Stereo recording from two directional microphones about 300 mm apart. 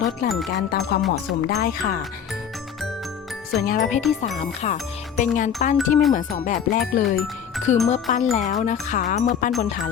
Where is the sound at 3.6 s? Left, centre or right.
Left.